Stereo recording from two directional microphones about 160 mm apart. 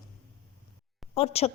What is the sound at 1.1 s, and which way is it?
Speech, 40° left (ahead or behind).